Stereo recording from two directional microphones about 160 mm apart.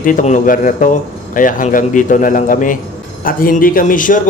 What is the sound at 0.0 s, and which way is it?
A man's voice, 55° left (ahead or behind).